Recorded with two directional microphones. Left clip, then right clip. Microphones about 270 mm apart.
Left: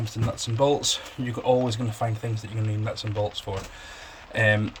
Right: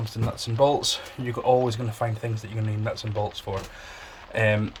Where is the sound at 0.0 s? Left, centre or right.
Centre.